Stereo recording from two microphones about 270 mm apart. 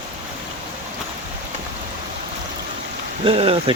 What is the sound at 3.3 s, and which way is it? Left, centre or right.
Speech, right.